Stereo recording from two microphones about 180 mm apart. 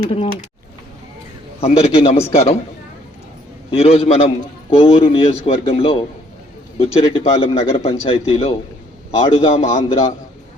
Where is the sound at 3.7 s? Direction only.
30° left (ahead or behind).